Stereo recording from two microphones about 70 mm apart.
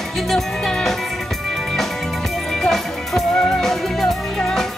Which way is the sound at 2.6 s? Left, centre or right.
Centre.